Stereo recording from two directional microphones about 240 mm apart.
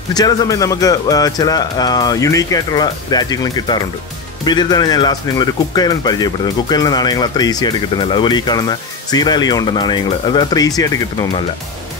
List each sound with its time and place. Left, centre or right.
0.1 s speech: centre